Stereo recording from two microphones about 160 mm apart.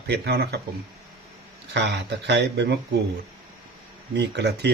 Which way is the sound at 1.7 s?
90° right.